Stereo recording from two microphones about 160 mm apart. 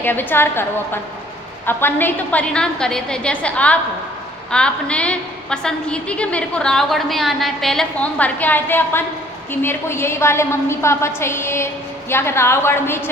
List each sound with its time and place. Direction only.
0.0 s a woman's voice: 10° left (ahead or behind)